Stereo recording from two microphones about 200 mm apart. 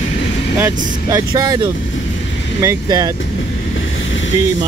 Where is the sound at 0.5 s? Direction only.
10° right (ahead or behind).